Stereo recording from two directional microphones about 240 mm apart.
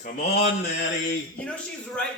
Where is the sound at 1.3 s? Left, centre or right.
Centre.